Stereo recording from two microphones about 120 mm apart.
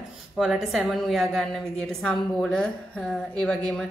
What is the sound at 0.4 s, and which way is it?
A woman's voice, 5° right (ahead or behind).